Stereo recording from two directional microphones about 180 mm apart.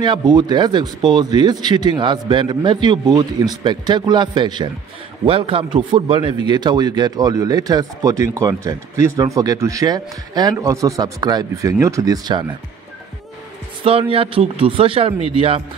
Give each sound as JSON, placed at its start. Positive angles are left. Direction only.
{"t": 0.0, "sound": "speech", "side_deg": -25}
{"t": 13.8, "sound": "speech", "side_deg": -30}